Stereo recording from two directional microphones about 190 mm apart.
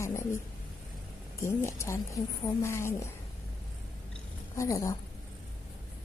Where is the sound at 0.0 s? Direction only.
15° left (ahead or behind).